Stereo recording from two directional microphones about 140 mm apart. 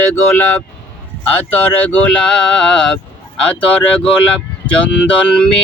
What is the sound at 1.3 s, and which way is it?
Speech, 10° left (ahead or behind).